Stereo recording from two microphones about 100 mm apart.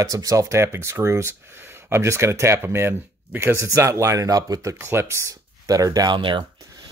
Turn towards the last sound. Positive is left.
turn(degrees=-55)  # may be behind; listen again after turning